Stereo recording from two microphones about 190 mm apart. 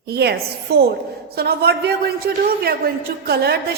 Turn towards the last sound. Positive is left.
turn(degrees=-55)  # may be behind; listen again after turning